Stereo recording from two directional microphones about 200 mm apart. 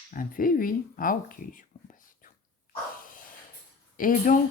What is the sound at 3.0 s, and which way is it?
Dog, 45° left (ahead or behind).